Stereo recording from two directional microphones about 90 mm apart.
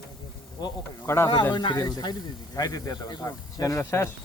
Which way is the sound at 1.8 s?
45° left (ahead or behind).